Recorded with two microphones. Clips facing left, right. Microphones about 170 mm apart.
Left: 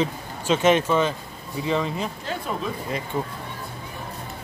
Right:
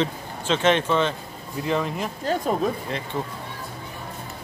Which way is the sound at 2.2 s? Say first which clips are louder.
Right 6 dB; 45° right (ahead or behind).